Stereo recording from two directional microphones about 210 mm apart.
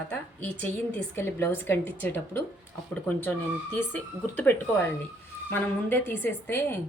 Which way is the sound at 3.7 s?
10° left (ahead or behind).